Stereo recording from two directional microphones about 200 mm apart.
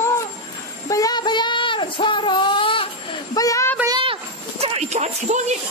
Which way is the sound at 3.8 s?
25° right (ahead or behind).